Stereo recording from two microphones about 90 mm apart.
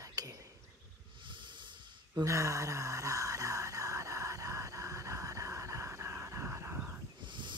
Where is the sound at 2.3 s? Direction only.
35° right (ahead or behind).